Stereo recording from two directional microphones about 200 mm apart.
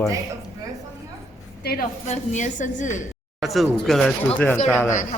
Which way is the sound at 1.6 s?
50° left (ahead or behind).